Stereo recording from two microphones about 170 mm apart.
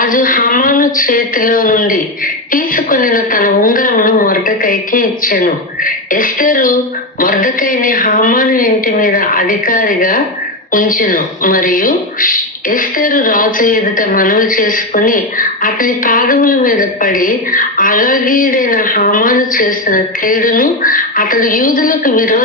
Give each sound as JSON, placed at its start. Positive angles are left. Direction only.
{"t": 0.0, "sound": "speech", "side_deg": 55}